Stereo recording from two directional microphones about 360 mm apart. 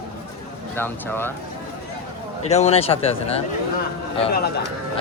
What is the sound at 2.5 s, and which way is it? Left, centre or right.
Speech, centre.